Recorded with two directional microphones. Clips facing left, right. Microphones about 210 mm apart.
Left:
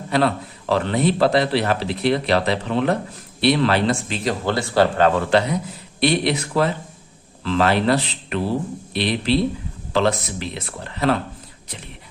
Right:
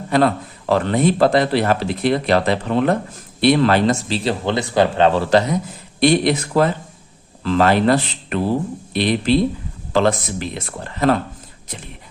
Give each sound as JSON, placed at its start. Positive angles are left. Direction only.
{"t": 0.1, "sound": "a man's voice", "side_deg": -50}
{"t": 4.4, "sound": "speech", "side_deg": -20}